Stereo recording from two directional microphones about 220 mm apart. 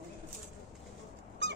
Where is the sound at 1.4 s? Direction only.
50° right (ahead or behind).